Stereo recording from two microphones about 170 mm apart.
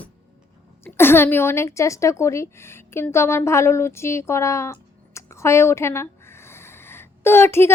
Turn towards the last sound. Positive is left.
turn(degrees=15)  # may be behind; listen again after turning